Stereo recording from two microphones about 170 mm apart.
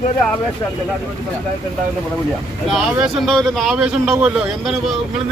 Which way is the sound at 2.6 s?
Centre (ahead or behind).